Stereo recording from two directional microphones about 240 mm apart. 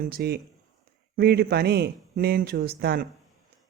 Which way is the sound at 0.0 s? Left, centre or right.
Right.